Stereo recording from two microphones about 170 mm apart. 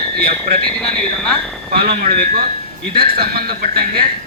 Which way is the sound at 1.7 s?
60° right (ahead or behind).